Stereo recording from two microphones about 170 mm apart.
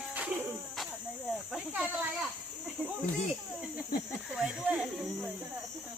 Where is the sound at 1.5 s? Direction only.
5° right (ahead or behind).